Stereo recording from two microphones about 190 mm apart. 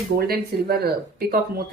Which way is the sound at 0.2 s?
55° right (ahead or behind).